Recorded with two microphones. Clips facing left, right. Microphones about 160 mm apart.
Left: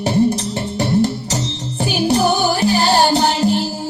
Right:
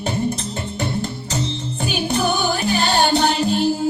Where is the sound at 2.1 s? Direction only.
35° left (ahead or behind).